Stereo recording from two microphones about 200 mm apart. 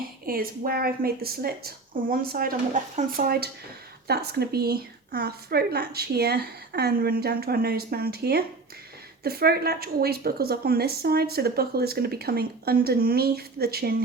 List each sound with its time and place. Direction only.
0.3 s a woman's voice: 45° right (ahead or behind)